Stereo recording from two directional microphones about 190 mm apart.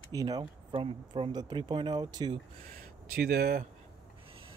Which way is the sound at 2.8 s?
50° right (ahead or behind).